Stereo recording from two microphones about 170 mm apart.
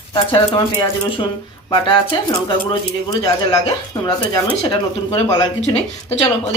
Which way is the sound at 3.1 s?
20° left (ahead or behind).